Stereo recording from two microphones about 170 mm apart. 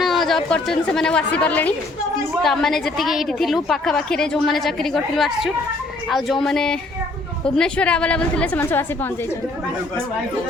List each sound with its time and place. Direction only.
0.0 s a woman's voice: centre (ahead or behind)